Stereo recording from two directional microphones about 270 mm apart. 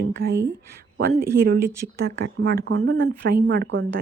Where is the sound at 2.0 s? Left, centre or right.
Right.